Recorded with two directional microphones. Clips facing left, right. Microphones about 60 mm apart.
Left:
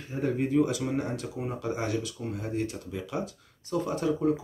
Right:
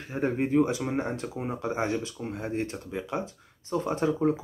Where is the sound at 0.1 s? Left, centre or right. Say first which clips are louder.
Right 1 dB; right.